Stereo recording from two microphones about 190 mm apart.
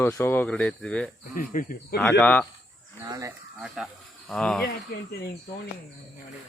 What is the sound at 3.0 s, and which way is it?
Speech, 20° right (ahead or behind).